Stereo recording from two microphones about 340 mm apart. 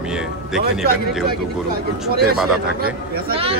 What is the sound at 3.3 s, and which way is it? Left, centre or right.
Speech, centre.